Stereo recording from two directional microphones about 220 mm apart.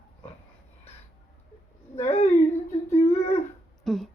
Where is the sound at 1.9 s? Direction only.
30° left (ahead or behind).